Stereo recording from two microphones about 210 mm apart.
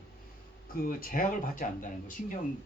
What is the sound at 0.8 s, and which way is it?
Speech, 45° left (ahead or behind).